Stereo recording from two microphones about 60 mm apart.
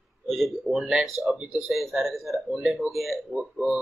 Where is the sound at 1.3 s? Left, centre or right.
Centre.